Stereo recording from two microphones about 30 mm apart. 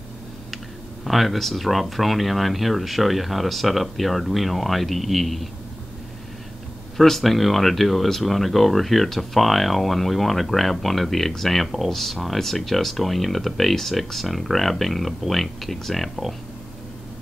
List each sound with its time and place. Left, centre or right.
1.0 s speech: centre
7.0 s speech: centre